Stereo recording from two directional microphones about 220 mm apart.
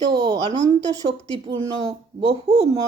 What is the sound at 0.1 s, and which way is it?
A woman's voice, 15° right (ahead or behind).